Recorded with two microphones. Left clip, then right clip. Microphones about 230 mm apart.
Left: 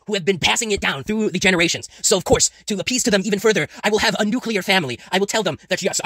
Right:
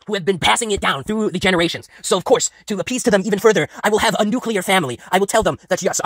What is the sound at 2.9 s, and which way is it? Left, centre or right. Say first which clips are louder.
Speech: right 3 dB; centre.